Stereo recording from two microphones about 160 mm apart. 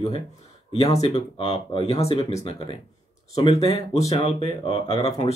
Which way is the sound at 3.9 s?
20° left (ahead or behind).